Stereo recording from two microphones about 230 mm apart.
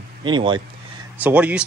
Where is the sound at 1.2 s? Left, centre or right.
Centre.